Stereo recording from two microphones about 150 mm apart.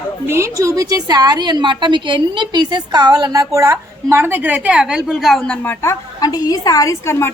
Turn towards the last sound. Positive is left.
turn(degrees=15)  # may be behind; listen again after turning